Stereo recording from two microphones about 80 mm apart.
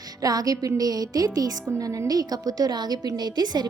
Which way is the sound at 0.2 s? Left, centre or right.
Right.